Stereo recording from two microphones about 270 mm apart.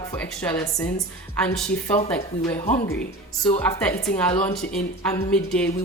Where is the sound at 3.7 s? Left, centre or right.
Centre.